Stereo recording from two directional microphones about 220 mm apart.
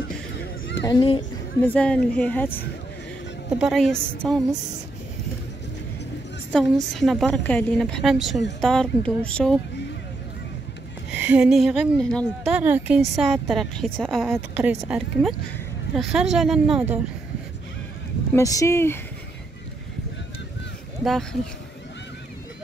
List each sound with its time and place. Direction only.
0.0 s a sound: 50° left (ahead or behind)
0.8 s speech: 20° left (ahead or behind)
1.7 s a woman's voice: 5° left (ahead or behind)
6.5 s a woman's voice: centre (ahead or behind)
11.1 s a woman's voice: 5° right (ahead or behind)
14.2 s a woman's voice: 10° right (ahead or behind)
18.3 s speech: 15° left (ahead or behind)
21.0 s speech: centre (ahead or behind)